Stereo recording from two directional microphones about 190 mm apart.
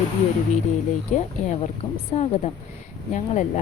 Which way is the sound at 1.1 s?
40° left (ahead or behind).